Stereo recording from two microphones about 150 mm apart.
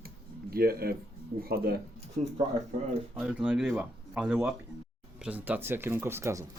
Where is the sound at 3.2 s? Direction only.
10° right (ahead or behind).